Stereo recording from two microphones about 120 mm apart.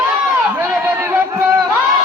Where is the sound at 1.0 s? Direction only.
20° right (ahead or behind).